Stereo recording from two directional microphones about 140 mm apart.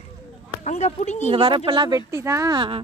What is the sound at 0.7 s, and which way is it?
Speech, 55° left (ahead or behind).